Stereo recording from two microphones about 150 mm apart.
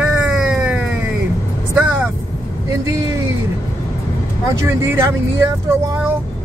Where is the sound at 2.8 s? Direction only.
20° right (ahead or behind).